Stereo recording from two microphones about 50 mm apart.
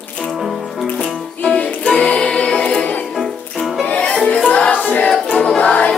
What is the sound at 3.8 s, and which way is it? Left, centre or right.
Music, left.